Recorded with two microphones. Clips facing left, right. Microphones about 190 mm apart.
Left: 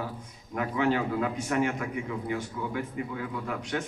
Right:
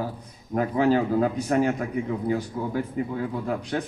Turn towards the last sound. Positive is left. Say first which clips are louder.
# right 5 dB
turn(degrees=-35)  # may be behind; listen again after turning